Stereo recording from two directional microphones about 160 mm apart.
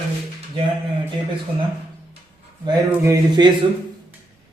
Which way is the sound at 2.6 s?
25° right (ahead or behind).